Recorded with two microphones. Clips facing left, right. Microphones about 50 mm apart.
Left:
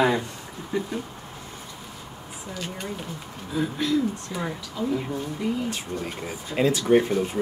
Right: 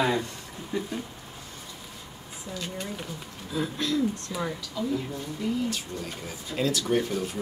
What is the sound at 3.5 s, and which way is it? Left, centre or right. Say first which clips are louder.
Speech: left 4 dB; centre.